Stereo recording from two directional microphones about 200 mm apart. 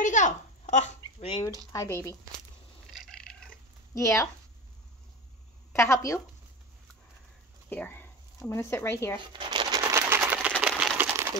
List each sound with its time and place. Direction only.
0.0 s a sound: 40° left (ahead or behind)
1.7 s speech: 15° left (ahead or behind)
2.9 s cat: centre (ahead or behind)
3.9 s speech: 15° left (ahead or behind)
5.7 s speech: 15° left (ahead or behind)
7.7 s speech: 10° left (ahead or behind)
9.2 s a sound: 25° right (ahead or behind); by 11.1 s 5° right (ahead or behind)